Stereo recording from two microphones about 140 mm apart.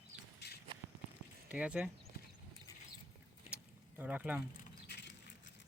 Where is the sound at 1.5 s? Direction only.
10° right (ahead or behind).